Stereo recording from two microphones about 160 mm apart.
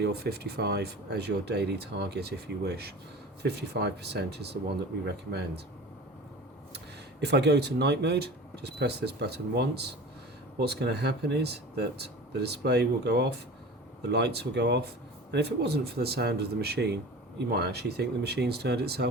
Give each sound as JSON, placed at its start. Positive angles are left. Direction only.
{"t": 0.0, "sound": "speech", "side_deg": -85}
{"t": 6.7, "sound": "speech", "side_deg": -90}